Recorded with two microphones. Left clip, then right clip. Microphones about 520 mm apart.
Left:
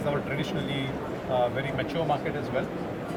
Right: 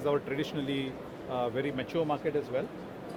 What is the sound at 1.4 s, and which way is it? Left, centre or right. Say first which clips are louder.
Speech: left 4 dB; right.